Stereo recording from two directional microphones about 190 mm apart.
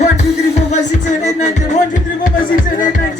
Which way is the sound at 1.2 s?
40° left (ahead or behind).